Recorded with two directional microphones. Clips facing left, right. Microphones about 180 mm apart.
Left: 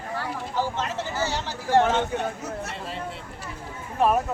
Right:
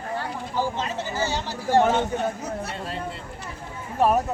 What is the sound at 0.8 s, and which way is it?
Speech, 15° right (ahead or behind).